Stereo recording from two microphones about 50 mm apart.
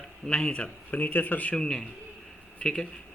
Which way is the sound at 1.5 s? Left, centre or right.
Centre.